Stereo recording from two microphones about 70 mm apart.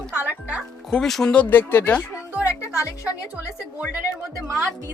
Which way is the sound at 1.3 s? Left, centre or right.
Left.